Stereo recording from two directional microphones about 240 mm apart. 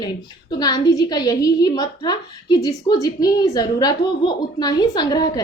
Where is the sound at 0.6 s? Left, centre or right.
Centre.